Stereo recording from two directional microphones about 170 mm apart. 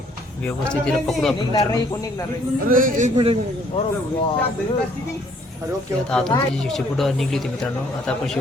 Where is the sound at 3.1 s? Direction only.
35° right (ahead or behind).